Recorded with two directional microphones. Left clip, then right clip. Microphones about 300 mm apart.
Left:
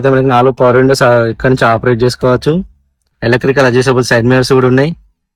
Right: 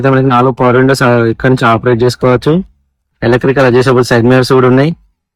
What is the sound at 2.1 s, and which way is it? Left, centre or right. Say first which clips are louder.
Speech: right 2 dB; centre.